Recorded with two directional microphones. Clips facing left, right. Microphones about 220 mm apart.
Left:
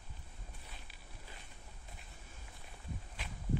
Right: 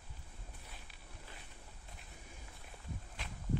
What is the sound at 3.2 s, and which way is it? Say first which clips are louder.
Walk: even; centre (ahead or behind).